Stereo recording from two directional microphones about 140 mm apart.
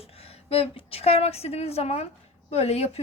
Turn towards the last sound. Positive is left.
turn(degrees=45)  # may be behind; listen again after turning